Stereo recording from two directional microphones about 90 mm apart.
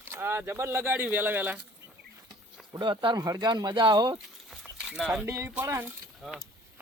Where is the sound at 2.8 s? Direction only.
60° right (ahead or behind).